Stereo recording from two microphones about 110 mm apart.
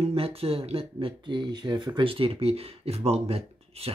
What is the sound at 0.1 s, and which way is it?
Speech, 60° right (ahead or behind).